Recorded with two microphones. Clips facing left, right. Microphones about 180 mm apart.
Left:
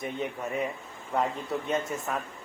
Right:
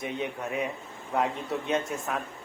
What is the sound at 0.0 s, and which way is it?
A man's voice, centre (ahead or behind).